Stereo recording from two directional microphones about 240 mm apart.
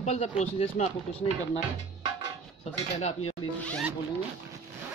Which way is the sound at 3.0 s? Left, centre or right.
Left.